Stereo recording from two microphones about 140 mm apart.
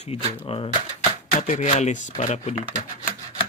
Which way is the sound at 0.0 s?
50° left (ahead or behind).